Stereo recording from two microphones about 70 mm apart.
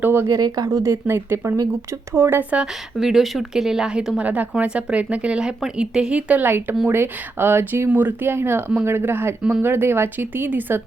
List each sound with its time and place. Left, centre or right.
0.0 s speech: right
0.3 s speech: right
0.8 s speech: right
3.0 s speech: centre
4.2 s a woman's voice: right